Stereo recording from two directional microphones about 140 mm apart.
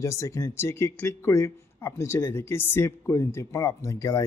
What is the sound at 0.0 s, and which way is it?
Speech, 20° left (ahead or behind).